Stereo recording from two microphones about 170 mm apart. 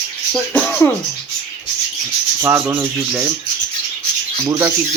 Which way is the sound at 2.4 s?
15° right (ahead or behind).